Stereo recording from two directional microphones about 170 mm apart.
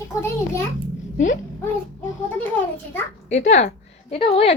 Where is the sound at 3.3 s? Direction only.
40° left (ahead or behind).